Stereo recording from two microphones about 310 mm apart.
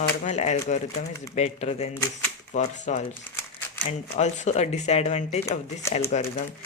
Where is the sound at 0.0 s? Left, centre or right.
Left.